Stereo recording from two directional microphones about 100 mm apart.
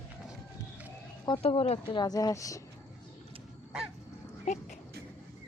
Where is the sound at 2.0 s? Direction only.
40° left (ahead or behind).